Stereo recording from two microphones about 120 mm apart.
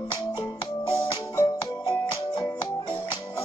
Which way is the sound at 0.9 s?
45° left (ahead or behind).